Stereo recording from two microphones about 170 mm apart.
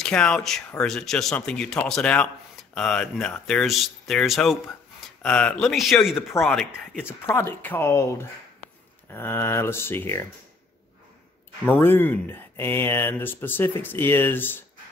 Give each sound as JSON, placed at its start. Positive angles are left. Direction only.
{"t": 0.0, "sound": "speech", "side_deg": 5}
{"t": 11.8, "sound": "speech", "side_deg": 10}